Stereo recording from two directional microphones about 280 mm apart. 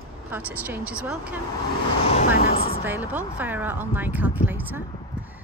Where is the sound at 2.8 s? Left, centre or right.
Centre.